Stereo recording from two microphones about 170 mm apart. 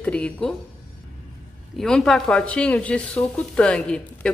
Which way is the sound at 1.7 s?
Centre (ahead or behind).